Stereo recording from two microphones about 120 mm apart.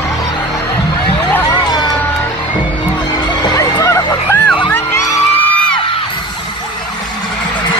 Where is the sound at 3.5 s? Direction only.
25° left (ahead or behind).